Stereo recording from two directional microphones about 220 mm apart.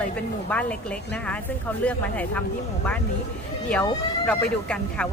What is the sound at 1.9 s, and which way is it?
Speech, 5° left (ahead or behind).